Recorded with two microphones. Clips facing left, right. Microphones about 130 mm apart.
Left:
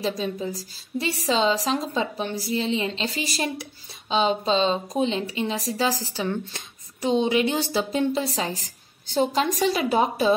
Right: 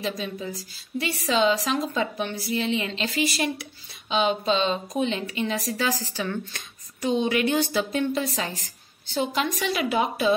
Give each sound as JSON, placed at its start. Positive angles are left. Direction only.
{"t": 0.0, "sound": "a woman's voice", "side_deg": 35}